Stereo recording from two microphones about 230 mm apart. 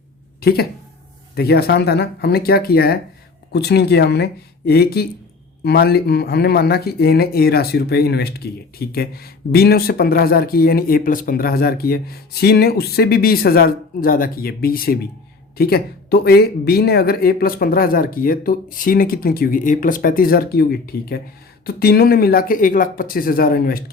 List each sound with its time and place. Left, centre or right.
0.3 s speech: left